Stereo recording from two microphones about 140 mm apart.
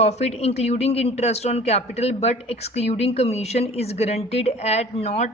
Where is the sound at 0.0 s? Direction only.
50° left (ahead or behind).